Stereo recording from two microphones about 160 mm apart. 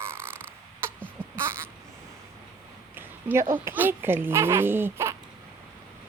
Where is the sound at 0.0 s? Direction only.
15° right (ahead or behind).